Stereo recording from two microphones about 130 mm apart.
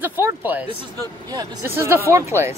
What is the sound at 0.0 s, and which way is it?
Speech, 15° right (ahead or behind).